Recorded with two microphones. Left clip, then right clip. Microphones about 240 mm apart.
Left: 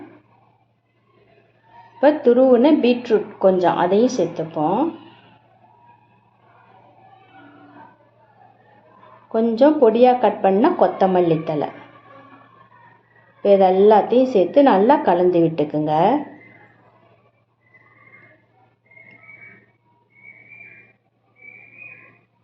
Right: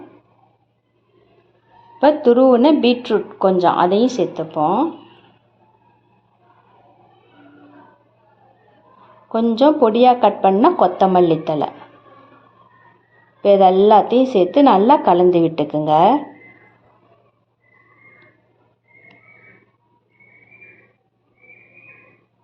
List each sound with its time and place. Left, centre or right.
2.0 s a woman's voice: right
9.3 s a woman's voice: right
13.4 s a woman's voice: right